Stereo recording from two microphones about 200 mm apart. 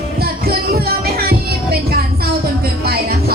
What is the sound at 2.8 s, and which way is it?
Music, 50° right (ahead or behind).